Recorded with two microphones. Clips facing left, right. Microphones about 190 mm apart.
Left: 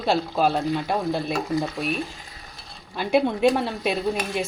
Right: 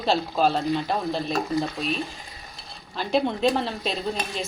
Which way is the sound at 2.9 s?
10° left (ahead or behind).